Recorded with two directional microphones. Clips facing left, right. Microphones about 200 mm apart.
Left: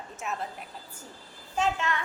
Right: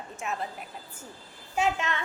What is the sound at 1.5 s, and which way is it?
Speech, 10° right (ahead or behind).